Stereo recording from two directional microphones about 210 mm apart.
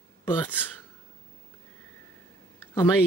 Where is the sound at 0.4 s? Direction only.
10° left (ahead or behind).